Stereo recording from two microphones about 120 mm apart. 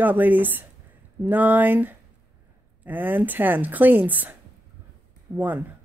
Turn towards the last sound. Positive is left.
turn(degrees=-15)  # may be behind; listen again after turning